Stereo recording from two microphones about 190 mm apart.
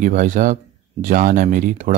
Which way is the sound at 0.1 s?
40° right (ahead or behind).